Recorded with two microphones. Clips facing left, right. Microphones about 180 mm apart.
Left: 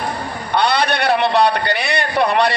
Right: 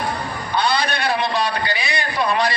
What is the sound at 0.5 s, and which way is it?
A man's voice, 65° left (ahead or behind).